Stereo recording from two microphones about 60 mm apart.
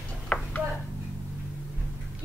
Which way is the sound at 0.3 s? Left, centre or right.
Left.